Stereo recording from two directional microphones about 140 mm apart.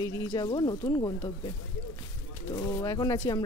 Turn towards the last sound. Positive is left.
turn(degrees=25)  # may be behind; listen again after turning